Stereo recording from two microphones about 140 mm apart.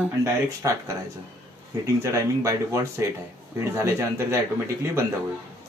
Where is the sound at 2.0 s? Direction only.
20° right (ahead or behind).